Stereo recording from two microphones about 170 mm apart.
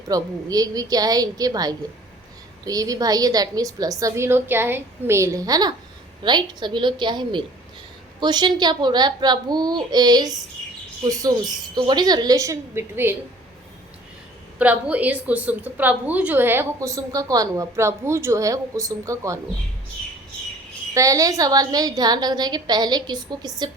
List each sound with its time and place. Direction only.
0.1 s a woman's voice: 20° right (ahead or behind)
14.6 s a woman's voice: 10° right (ahead or behind)
20.9 s a woman's voice: 20° right (ahead or behind)